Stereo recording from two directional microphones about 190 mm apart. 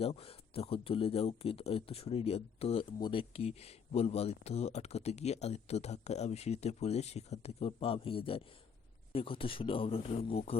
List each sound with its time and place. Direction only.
0.0 s speech: 30° left (ahead or behind)